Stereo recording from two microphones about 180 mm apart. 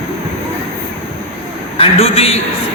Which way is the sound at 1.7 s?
35° left (ahead or behind).